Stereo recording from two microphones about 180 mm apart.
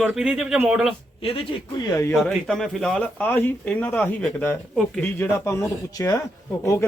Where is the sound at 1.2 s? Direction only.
30° left (ahead or behind).